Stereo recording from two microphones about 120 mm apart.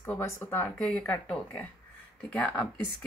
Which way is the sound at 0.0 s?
20° left (ahead or behind).